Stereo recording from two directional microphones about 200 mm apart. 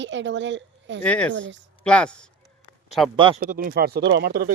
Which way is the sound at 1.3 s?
65° right (ahead or behind).